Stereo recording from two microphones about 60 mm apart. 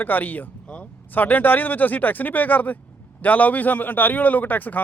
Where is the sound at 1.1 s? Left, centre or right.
Left.